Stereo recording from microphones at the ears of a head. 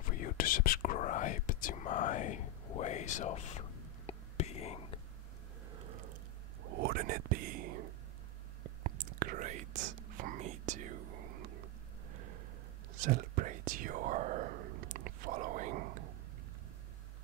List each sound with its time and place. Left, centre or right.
0.0 s whispering: left
5.7 s a sound: right
6.6 s whispering: right